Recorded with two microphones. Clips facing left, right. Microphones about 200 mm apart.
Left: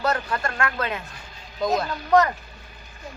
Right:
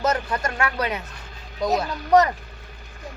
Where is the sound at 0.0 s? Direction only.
20° right (ahead or behind).